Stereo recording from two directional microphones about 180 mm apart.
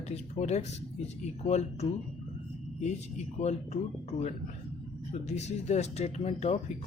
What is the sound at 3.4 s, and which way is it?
Speech, 35° left (ahead or behind).